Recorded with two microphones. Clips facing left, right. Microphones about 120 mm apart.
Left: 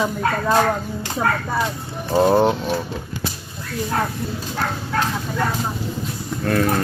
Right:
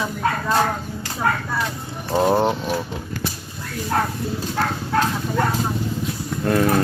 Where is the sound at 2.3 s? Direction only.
Centre (ahead or behind).